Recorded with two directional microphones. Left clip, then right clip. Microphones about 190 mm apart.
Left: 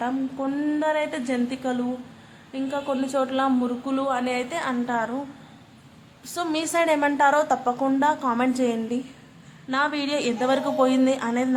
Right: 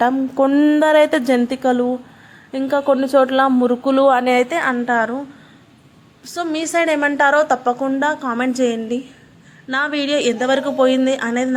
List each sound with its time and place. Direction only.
0.0 s a woman's voice: 40° right (ahead or behind)
6.3 s a woman's voice: 10° right (ahead or behind)